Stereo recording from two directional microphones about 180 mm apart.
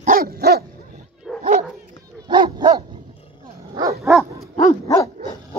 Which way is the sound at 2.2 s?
25° right (ahead or behind).